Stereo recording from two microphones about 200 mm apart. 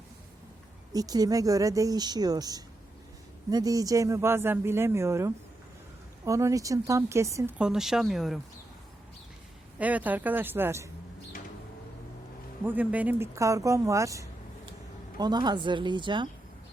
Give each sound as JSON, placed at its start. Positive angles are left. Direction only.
{"t": 0.9, "sound": "speech", "side_deg": -20}
{"t": 7.6, "sound": "speech", "side_deg": -5}
{"t": 9.7, "sound": "speech", "side_deg": -5}
{"t": 12.6, "sound": "speech", "side_deg": -10}